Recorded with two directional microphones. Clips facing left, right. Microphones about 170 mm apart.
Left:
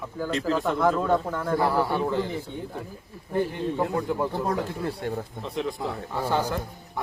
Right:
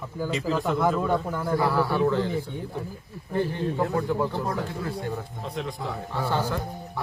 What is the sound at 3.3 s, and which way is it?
Speech, 10° left (ahead or behind).